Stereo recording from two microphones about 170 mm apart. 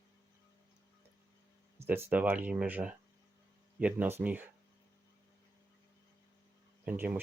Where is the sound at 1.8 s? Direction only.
10° right (ahead or behind).